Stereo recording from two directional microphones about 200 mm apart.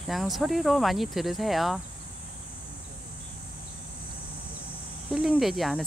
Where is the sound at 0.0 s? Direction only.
Centre (ahead or behind).